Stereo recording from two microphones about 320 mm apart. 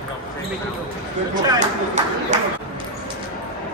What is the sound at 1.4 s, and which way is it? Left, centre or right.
Speech, right.